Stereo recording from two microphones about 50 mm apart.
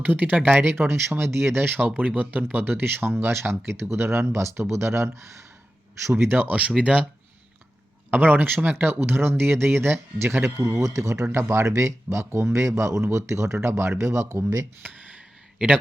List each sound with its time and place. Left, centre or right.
0.0 s speech: right
0.7 s speech: right
6.1 s speech: right
6.5 s speech: right
8.1 s speech: right
10.9 s speech: right
14.0 s speech: right
14.8 s speech: right